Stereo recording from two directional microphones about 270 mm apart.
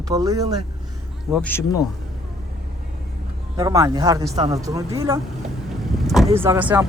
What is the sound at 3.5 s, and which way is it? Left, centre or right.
Speech, centre.